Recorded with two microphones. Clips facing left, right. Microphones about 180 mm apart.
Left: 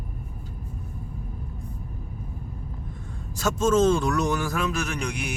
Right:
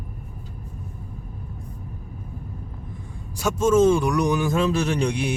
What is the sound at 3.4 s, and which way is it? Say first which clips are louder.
Speech: right 3 dB; 10° right (ahead or behind).